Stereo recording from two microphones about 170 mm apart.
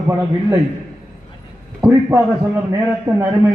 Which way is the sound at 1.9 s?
15° right (ahead or behind).